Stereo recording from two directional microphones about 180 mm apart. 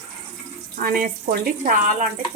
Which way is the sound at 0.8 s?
50° right (ahead or behind).